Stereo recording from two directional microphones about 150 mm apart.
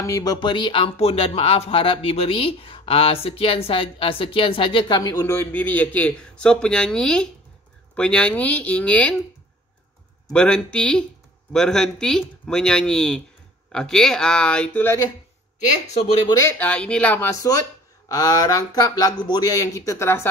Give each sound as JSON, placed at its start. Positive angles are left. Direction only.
{"t": 0.0, "sound": "speech", "side_deg": 25}
{"t": 5.2, "sound": "a man's voice", "side_deg": 15}
{"t": 10.3, "sound": "a man's voice", "side_deg": 5}
{"t": 16.3, "sound": "speech", "side_deg": 20}
{"t": 16.5, "sound": "speech", "side_deg": 10}